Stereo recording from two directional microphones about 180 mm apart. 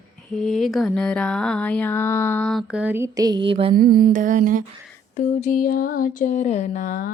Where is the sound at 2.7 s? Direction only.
10° right (ahead or behind); by 3.7 s 30° right (ahead or behind).